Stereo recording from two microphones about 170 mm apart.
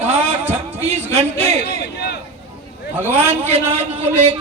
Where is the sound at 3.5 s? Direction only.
35° right (ahead or behind).